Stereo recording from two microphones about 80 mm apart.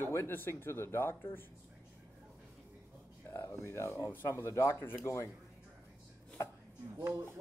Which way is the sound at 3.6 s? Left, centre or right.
Left.